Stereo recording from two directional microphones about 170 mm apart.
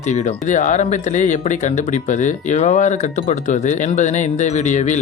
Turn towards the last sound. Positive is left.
turn(degrees=45)  # may be behind; listen again after turning